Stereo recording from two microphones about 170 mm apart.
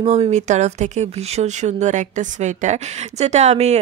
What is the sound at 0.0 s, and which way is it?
A woman's voice, 40° right (ahead or behind).